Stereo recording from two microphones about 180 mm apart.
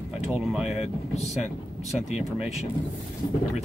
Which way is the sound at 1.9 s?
5° right (ahead or behind).